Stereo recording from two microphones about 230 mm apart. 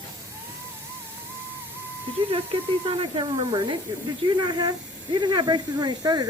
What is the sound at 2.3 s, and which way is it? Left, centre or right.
Speech, right.